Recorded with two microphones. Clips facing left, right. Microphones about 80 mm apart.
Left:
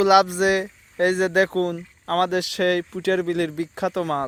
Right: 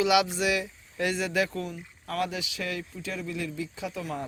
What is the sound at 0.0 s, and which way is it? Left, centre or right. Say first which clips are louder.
Speech: left 8 dB; left.